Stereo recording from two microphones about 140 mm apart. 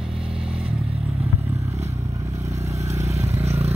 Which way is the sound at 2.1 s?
20° right (ahead or behind).